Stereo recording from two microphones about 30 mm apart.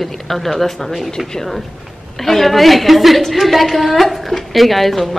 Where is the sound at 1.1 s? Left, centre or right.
Centre.